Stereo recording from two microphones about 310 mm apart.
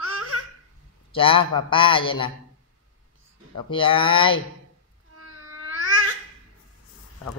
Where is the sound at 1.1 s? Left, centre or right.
Centre.